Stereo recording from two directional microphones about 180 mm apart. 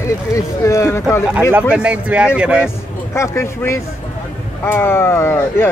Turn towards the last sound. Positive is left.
turn(degrees=15)  # may be behind; listen again after turning